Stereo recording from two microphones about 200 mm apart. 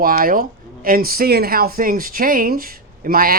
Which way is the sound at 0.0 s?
45° right (ahead or behind).